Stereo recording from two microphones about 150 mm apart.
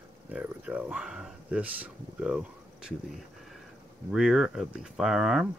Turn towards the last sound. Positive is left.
turn(degrees=0)  # may be behind; listen again after turning